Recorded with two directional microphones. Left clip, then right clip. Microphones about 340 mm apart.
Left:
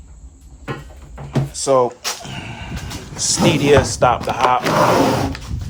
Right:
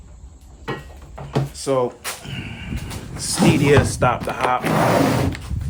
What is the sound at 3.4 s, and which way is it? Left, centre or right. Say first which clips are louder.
Speech: left 2 dB; centre.